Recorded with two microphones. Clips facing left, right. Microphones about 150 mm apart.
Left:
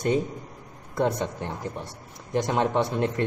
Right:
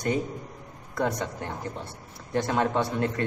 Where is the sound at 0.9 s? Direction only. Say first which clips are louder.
Left 3 dB; 25° left (ahead or behind).